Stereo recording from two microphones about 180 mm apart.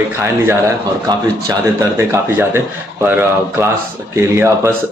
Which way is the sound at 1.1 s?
25° right (ahead or behind).